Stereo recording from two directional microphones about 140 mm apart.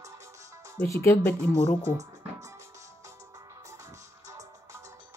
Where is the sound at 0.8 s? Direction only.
15° left (ahead or behind).